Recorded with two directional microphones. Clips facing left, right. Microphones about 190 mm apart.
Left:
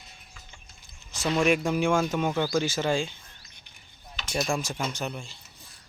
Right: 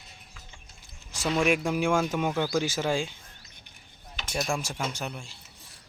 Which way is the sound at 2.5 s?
10° right (ahead or behind).